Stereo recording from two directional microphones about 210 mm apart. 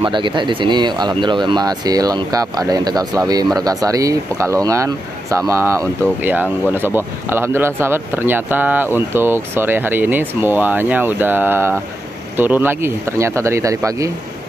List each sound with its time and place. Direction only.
0.0 s speech: 25° right (ahead or behind)